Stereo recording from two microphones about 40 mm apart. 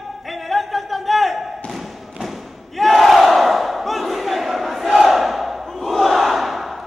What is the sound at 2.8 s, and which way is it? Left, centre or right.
Battle cry, centre.